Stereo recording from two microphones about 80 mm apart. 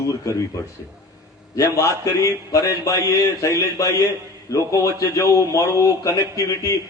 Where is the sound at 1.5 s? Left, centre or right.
Left.